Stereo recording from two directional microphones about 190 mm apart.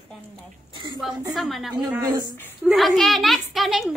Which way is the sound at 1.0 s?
Centre (ahead or behind).